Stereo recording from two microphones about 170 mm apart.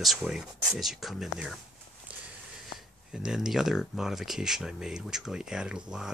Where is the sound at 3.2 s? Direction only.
5° right (ahead or behind).